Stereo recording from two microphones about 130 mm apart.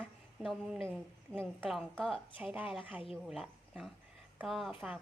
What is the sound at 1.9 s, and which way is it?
Speech, 5° left (ahead or behind).